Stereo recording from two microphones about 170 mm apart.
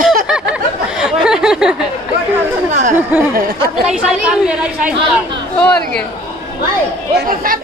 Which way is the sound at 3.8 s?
5° right (ahead or behind).